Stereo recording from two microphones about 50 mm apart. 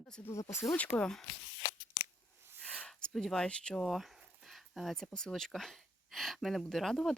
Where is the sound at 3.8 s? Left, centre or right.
Centre.